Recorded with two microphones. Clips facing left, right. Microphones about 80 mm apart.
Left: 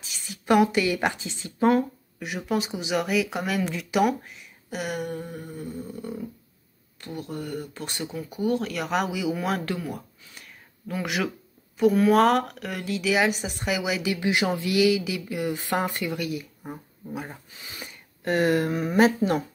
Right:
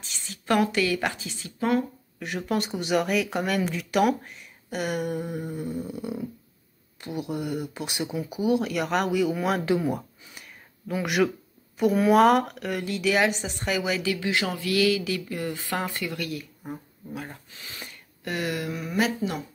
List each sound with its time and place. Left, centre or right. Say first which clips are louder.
0.0 s speech: left 1 dB; centre; by 1.9 s left
2.1 s speech: even; centre
5.2 s speech: right 4 dB; centre
9.7 s speech: right 6 dB; right
10.3 s a sound: even; centre
11.7 s speech: left 1 dB; centre
14.1 s speech: left 3 dB; centre
15.5 s speech: left 3 dB; left
18.2 s speech: left 7 dB; left